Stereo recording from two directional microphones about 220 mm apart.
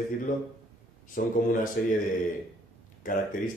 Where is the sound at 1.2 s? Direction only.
40° left (ahead or behind).